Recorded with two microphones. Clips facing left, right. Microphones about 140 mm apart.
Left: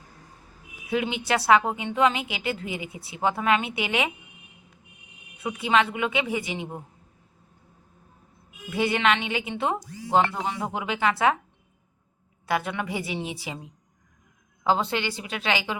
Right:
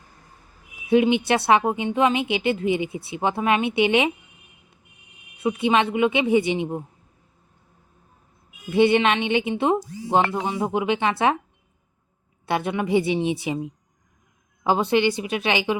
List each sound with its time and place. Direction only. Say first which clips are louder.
1.0 s a woman's voice: right 4 dB; 20° right (ahead or behind)
5.4 s a woman's voice: right 3 dB; 25° right (ahead or behind)
8.7 s a woman's voice: right 6 dB; 25° right (ahead or behind)
12.5 s a woman's voice: right 5 dB; 25° right (ahead or behind)
14.6 s a woman's voice: right 5 dB; 15° right (ahead or behind)